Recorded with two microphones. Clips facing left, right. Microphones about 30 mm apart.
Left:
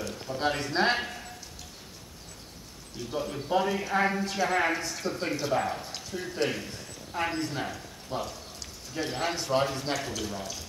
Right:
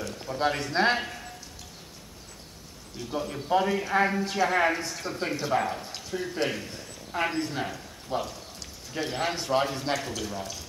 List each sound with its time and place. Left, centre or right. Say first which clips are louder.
0.0 s a man's voice: right 2 dB; centre
3.0 s a man's voice: right 1 dB; centre